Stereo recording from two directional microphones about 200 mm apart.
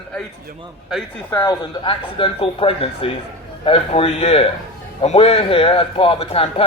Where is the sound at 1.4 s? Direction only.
25° left (ahead or behind).